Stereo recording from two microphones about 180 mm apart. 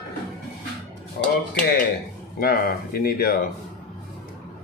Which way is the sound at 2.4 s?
55° left (ahead or behind).